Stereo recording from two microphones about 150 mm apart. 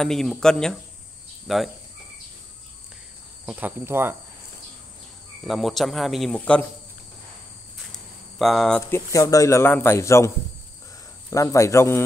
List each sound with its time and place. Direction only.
0.0 s speech: 5° left (ahead or behind)
3.4 s speech: 10° right (ahead or behind)
5.5 s speech: centre (ahead or behind)
8.4 s speech: centre (ahead or behind)
8.9 s speech: 20° left (ahead or behind)